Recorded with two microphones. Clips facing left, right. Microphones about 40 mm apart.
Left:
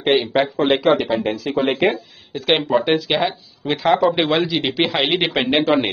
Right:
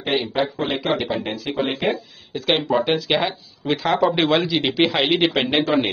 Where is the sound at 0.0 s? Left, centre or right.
Left.